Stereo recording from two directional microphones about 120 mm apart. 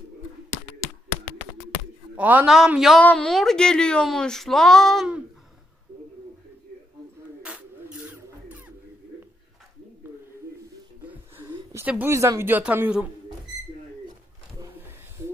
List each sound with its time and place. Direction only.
2.1 s speech: 15° right (ahead or behind)
3.0 s speech: 10° left (ahead or behind)
7.4 s music: 10° right (ahead or behind)
11.1 s a sound: 15° right (ahead or behind)
12.1 s speech: 25° right (ahead or behind)